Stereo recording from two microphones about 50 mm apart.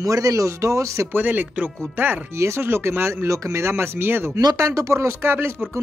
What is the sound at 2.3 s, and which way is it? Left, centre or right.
Speech, right.